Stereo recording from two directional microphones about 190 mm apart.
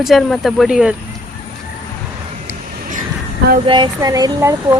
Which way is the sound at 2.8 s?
45° right (ahead or behind).